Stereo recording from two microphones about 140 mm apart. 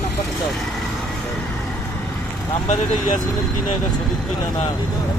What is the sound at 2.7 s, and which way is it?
Speech, 65° left (ahead or behind).